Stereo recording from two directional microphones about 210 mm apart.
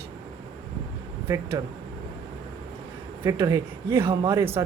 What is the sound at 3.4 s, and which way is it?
A man's voice, 20° right (ahead or behind).